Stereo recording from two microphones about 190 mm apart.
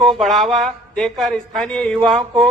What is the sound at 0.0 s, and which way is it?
A man's voice, centre (ahead or behind).